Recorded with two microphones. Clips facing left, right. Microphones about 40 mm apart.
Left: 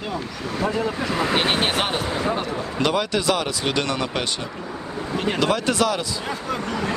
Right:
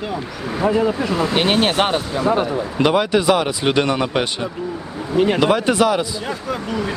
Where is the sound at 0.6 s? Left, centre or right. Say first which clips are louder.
Right 6 dB; centre.